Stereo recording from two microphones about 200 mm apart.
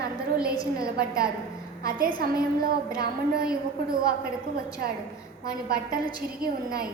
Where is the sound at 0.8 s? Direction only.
50° right (ahead or behind).